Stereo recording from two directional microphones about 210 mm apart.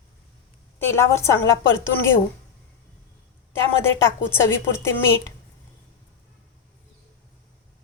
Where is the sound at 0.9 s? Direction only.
10° left (ahead or behind).